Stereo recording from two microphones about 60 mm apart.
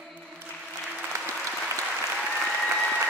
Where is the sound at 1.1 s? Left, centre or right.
Right.